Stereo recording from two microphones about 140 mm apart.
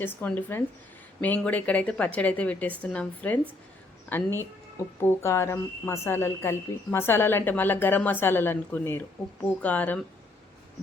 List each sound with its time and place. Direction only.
0.0 s a woman's voice: 15° left (ahead or behind)
4.9 s a woman's voice: 20° left (ahead or behind)